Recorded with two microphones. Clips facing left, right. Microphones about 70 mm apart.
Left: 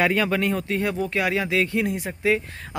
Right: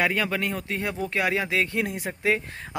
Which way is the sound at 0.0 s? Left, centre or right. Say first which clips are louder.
Left 4 dB; centre.